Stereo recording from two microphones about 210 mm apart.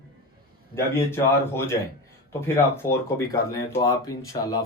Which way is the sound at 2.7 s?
10° left (ahead or behind).